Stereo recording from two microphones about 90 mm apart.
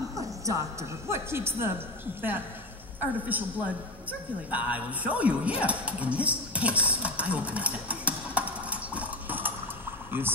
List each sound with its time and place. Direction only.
0.5 s speech: 35° right (ahead or behind)
3.0 s a man's voice: 20° right (ahead or behind)
5.6 s dog: 15° right (ahead or behind)